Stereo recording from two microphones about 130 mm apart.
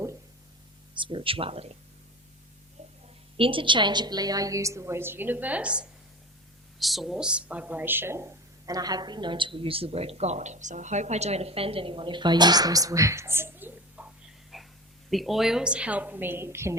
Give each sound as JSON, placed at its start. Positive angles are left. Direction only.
{"t": 0.9, "sound": "speech", "side_deg": -40}
{"t": 3.3, "sound": "a woman's voice", "side_deg": -45}
{"t": 14.5, "sound": "a sound", "side_deg": 0}
{"t": 15.1, "sound": "a woman's voice", "side_deg": 0}